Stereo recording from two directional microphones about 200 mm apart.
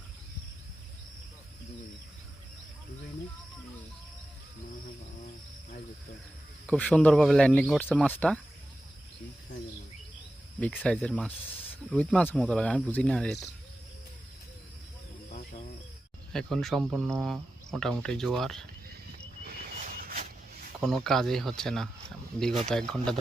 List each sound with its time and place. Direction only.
6.7 s speech: 5° left (ahead or behind)
10.6 s speech: 5° left (ahead or behind)
16.3 s speech: centre (ahead or behind)
20.0 s a sound: 45° right (ahead or behind)
20.8 s speech: centre (ahead or behind)